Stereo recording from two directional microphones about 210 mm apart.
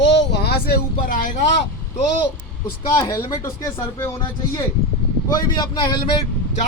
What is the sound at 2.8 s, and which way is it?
Speech, 15° left (ahead or behind).